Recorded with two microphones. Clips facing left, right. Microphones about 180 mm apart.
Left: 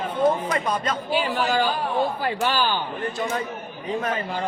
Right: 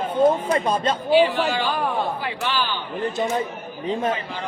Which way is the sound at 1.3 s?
45° left (ahead or behind).